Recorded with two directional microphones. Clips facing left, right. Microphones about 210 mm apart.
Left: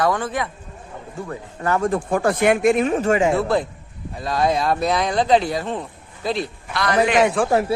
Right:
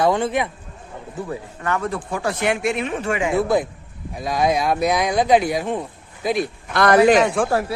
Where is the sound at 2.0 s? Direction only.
50° left (ahead or behind).